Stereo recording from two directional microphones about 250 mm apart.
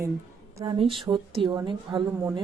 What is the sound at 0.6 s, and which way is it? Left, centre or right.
Speech, centre.